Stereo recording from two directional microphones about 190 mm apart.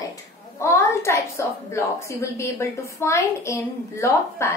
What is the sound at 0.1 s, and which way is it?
A woman's voice, 15° left (ahead or behind).